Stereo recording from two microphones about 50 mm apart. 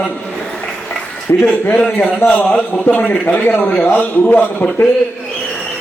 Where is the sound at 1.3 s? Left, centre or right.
Left.